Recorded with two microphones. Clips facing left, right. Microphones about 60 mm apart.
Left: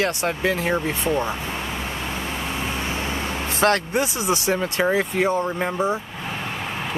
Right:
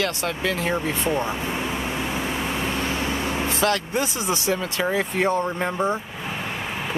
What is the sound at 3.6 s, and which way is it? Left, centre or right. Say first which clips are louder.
Speech: left 5 dB; left.